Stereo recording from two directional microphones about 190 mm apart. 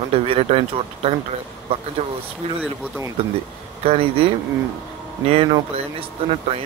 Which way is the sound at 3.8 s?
30° right (ahead or behind).